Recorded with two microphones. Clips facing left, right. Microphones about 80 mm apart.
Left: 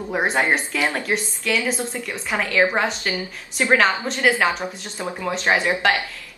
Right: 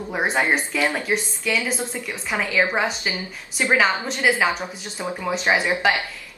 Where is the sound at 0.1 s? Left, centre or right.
Centre.